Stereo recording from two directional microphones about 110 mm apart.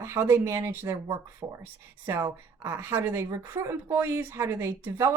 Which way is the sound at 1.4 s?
40° right (ahead or behind).